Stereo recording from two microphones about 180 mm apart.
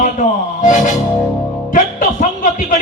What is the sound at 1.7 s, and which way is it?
Music, 45° left (ahead or behind).